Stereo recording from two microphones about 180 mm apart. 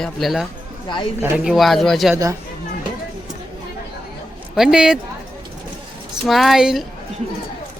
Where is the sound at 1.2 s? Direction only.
10° right (ahead or behind).